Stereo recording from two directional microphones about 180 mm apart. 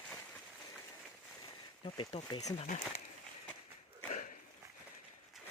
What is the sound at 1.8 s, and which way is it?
Speech, 30° left (ahead or behind).